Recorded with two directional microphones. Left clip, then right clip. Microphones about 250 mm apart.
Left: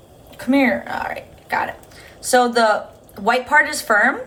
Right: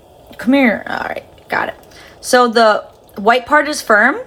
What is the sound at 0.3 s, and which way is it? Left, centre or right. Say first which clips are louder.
Speech: right 4 dB; right.